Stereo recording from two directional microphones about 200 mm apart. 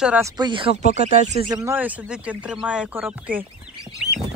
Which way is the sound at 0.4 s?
25° right (ahead or behind).